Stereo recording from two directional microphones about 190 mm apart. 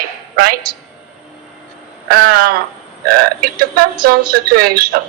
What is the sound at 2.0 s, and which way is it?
A woman's voice, 50° right (ahead or behind).